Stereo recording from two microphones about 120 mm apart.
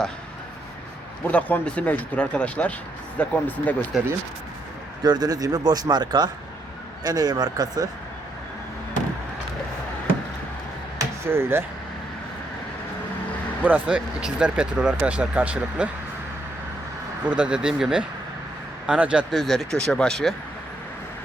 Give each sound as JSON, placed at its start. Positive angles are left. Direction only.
{"t": 1.3, "sound": "speech", "side_deg": 10}
{"t": 5.0, "sound": "speech", "side_deg": -35}
{"t": 10.9, "sound": "a sound", "side_deg": -20}
{"t": 13.7, "sound": "speech", "side_deg": -10}
{"t": 17.2, "sound": "speech", "side_deg": -10}